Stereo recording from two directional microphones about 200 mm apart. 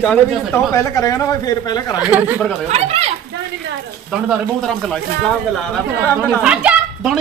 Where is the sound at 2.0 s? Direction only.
10° right (ahead or behind).